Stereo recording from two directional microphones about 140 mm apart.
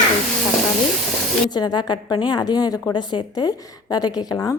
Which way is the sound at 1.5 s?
30° left (ahead or behind).